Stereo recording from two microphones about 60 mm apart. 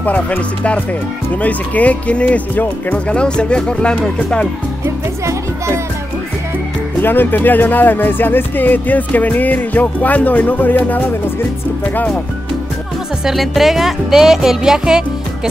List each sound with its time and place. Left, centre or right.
0.0 s speech: left
7.0 s speech: left
13.2 s speech: centre